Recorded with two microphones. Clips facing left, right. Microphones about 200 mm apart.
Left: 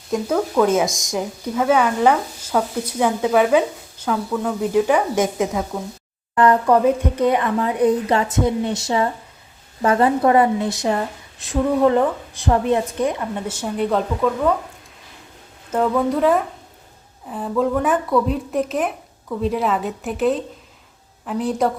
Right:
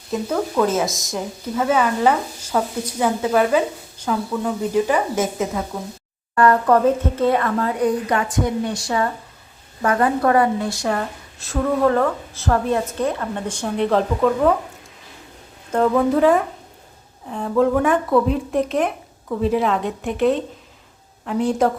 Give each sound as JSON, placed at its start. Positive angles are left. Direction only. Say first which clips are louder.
{"t": 0.3, "sound": "speech", "louder": "left 2 dB", "side_deg": 0}
{"t": 4.7, "sound": "speech", "louder": "left 3 dB", "side_deg": 5}
{"t": 6.3, "sound": "a woman's voice", "louder": "even", "side_deg": 15}
{"t": 15.7, "sound": "speech", "louder": "right 2 dB", "side_deg": 0}